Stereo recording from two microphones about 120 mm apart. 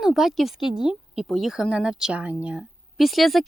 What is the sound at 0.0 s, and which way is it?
Speech, centre (ahead or behind).